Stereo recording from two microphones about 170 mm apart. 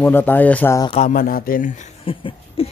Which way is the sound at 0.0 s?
10° left (ahead or behind).